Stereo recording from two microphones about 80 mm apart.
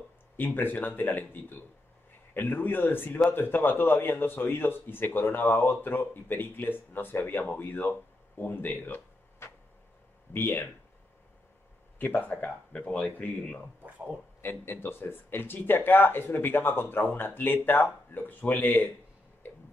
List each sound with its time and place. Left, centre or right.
0.4 s a man's voice: left
8.4 s a sound: left
10.3 s a man's voice: left
12.3 s speech: centre
13.8 s speech: centre
14.4 s a man's voice: left
19.4 s tick-tock: left